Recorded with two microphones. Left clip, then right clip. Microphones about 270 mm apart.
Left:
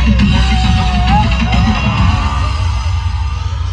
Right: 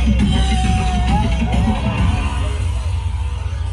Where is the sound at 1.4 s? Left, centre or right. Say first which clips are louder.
Left 6 dB; left.